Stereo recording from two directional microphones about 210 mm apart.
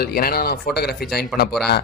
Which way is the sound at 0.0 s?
45° left (ahead or behind).